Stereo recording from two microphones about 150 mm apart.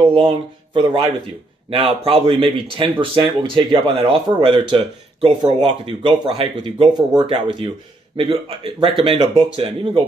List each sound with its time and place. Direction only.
0.0 s speech: 35° right (ahead or behind)
8.8 s speech: centre (ahead or behind)
9.4 s speech: 35° right (ahead or behind)